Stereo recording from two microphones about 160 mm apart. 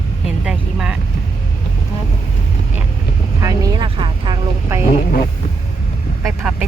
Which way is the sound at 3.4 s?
25° right (ahead or behind).